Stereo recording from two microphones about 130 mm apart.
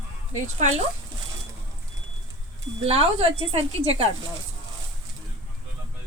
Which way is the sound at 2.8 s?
50° right (ahead or behind).